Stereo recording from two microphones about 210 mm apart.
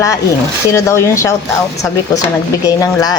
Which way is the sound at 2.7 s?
20° left (ahead or behind).